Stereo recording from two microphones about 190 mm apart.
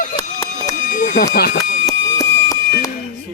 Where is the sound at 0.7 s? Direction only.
45° left (ahead or behind).